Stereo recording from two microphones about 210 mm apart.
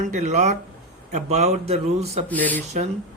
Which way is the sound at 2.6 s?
30° right (ahead or behind).